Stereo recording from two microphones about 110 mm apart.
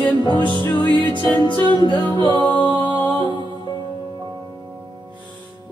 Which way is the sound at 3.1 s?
45° right (ahead or behind).